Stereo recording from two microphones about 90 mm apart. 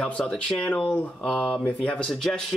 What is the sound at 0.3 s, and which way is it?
Speech, 10° left (ahead or behind).